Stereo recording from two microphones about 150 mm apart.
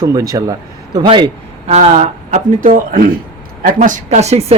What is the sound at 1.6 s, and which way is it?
Speech, 45° right (ahead or behind).